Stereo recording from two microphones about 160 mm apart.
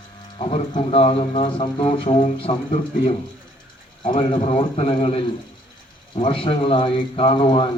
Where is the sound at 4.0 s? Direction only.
55° left (ahead or behind).